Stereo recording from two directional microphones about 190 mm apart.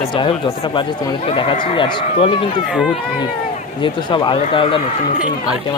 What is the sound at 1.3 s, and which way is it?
Speech, 30° left (ahead or behind).